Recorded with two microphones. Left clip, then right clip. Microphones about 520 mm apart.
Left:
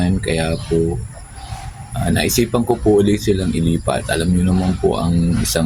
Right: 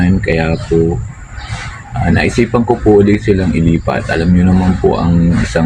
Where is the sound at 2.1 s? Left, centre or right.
Left.